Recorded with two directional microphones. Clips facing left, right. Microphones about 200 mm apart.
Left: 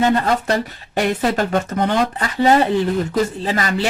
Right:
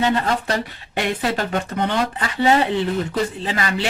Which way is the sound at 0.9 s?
40° left (ahead or behind).